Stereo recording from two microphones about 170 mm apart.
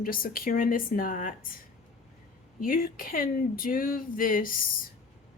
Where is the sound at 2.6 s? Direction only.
60° left (ahead or behind).